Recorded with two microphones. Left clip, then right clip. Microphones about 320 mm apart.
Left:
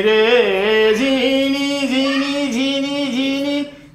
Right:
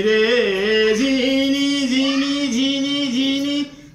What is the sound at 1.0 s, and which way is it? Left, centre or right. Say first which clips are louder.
Singing: left 2 dB; centre.